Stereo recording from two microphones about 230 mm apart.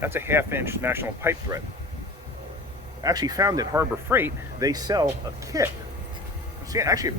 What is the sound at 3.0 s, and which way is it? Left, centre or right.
Speech, centre.